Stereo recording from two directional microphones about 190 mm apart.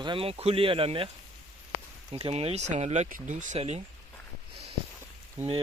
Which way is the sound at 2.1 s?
30° right (ahead or behind).